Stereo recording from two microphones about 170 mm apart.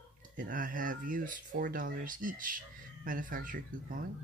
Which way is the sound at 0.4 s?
55° right (ahead or behind).